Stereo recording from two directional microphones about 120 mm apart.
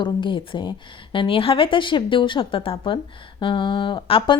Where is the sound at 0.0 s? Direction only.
45° left (ahead or behind).